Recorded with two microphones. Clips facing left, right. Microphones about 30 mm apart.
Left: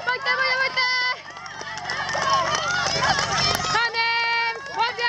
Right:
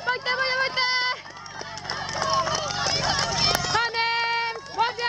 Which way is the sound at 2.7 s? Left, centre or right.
Centre.